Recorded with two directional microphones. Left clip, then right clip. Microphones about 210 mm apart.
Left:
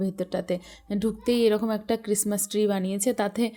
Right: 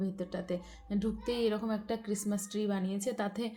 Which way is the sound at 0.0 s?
45° left (ahead or behind).